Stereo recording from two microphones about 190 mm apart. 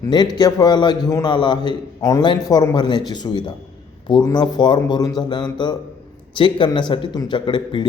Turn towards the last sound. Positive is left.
turn(degrees=25)  # may be behind; listen again after turning